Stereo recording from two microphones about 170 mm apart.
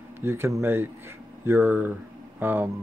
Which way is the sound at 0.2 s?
15° right (ahead or behind).